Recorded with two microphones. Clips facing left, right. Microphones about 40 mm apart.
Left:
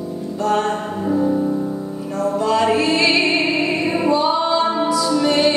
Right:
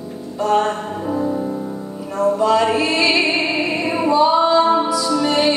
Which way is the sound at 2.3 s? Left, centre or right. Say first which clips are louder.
Right 1 dB; centre.